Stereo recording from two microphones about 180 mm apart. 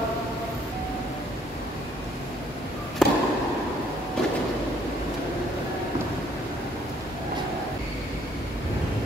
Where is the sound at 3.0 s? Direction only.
Centre (ahead or behind).